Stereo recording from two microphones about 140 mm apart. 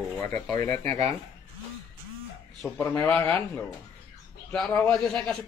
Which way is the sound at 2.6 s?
5° left (ahead or behind).